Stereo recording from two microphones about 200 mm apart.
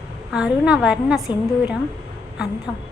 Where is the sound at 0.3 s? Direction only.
5° right (ahead or behind).